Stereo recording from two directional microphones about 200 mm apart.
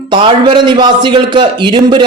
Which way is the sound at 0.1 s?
25° right (ahead or behind).